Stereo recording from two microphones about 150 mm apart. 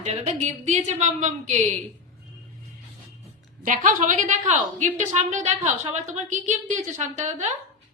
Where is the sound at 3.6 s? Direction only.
60° right (ahead or behind).